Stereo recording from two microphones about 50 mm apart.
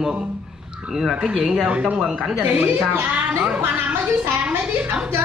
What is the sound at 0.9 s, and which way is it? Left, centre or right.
Speech, centre.